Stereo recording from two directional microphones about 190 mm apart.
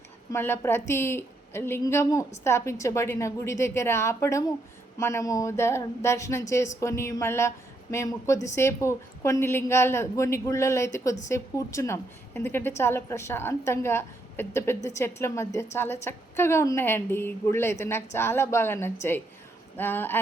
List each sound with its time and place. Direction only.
0.3 s a woman's voice: 10° left (ahead or behind)